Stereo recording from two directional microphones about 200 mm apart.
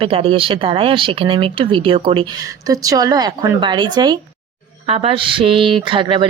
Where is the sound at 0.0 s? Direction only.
30° right (ahead or behind).